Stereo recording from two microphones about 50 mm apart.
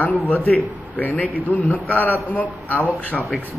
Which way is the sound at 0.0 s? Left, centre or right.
Left.